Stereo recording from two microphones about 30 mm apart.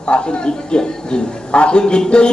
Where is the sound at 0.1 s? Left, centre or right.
Left.